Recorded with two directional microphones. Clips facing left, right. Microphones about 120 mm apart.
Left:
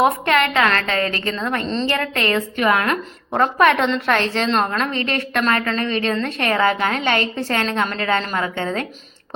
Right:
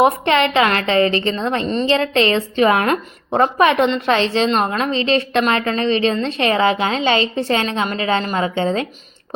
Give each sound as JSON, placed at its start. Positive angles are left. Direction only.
{"t": 0.0, "sound": "a woman's voice", "side_deg": -20}
{"t": 1.6, "sound": "a woman's voice", "side_deg": -10}
{"t": 1.9, "sound": "a woman's voice", "side_deg": -20}
{"t": 3.4, "sound": "a woman's voice", "side_deg": -15}